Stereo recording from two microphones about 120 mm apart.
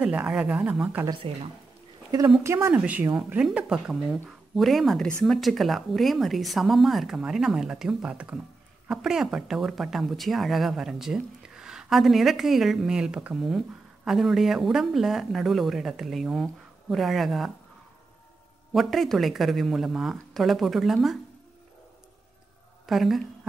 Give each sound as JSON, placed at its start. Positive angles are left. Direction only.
{"t": 0.0, "sound": "speech", "side_deg": -5}
{"t": 1.3, "sound": "speech", "side_deg": -55}
{"t": 2.4, "sound": "speech", "side_deg": -25}
{"t": 2.7, "sound": "speech", "side_deg": -10}
{"t": 18.7, "sound": "speech", "side_deg": 0}
{"t": 22.8, "sound": "speech", "side_deg": 0}